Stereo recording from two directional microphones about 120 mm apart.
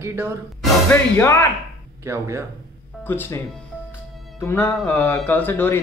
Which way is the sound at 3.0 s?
20° left (ahead or behind).